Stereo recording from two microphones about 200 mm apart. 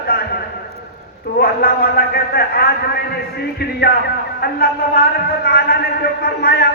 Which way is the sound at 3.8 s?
50° left (ahead or behind).